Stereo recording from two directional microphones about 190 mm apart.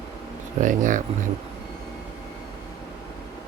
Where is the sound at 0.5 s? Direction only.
40° right (ahead or behind).